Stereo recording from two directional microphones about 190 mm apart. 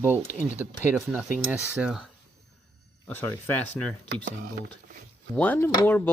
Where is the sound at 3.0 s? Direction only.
10° left (ahead or behind).